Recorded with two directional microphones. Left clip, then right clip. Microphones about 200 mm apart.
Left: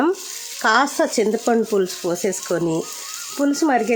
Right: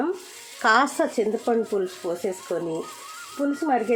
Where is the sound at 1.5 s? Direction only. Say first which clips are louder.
Left 5 dB; 50° left (ahead or behind).